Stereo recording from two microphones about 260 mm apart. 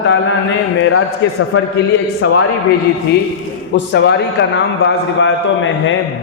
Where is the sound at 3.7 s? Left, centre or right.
Left.